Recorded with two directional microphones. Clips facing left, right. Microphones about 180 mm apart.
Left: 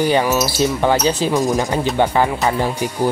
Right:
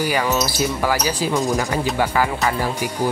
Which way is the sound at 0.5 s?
25° left (ahead or behind).